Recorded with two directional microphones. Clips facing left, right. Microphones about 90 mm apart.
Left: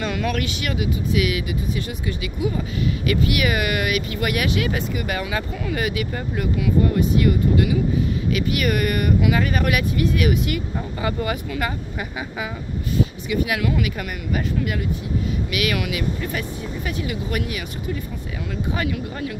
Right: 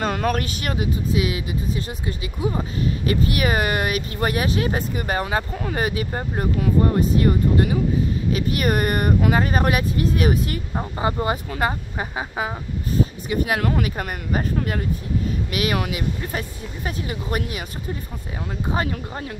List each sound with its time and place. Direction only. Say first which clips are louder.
0.0 s speech: right 2 dB; 40° right (ahead or behind)
18.7 s speech: right 1 dB; 35° right (ahead or behind)